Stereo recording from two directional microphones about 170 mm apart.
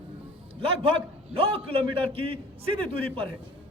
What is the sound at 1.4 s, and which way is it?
A man's voice, 35° right (ahead or behind).